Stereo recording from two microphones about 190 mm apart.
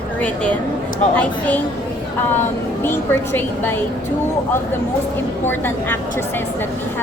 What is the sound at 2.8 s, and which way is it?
Speech, 10° left (ahead or behind).